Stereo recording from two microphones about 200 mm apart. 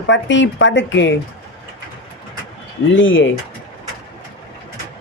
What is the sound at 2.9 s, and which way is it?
Speech, 70° left (ahead or behind).